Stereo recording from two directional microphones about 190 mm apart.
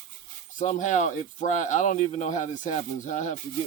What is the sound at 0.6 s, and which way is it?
Speech, 40° left (ahead or behind).